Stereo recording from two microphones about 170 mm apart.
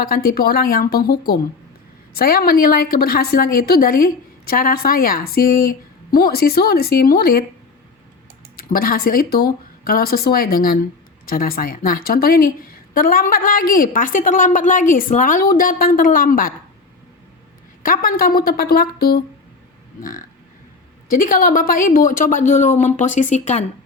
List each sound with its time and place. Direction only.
0.0 s a woman's voice: 60° left (ahead or behind)
8.5 s a woman's voice: 60° left (ahead or behind)
17.8 s a woman's voice: 55° left (ahead or behind)